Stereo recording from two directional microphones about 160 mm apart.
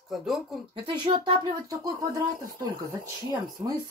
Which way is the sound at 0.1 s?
Centre (ahead or behind).